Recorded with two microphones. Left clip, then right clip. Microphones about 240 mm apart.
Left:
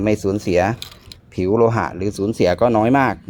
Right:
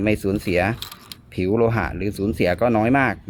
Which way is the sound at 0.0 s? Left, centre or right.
Centre.